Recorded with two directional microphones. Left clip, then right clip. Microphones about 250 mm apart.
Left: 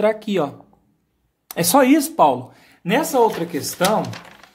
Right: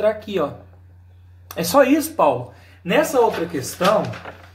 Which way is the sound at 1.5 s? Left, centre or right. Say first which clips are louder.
Left 1 dB; left.